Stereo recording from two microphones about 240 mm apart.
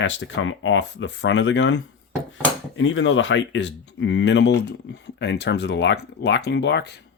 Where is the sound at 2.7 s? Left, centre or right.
Left.